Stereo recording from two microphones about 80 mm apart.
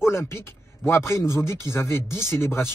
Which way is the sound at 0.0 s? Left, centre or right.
Left.